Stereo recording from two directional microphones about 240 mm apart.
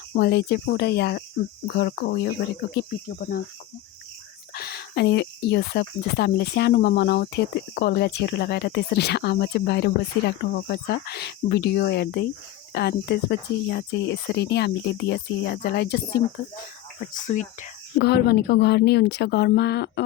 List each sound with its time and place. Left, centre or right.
0.2 s speech: left
4.5 s speech: left
17.2 s speech: left